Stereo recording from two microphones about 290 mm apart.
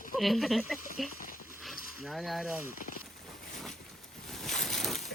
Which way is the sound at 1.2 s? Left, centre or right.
Left.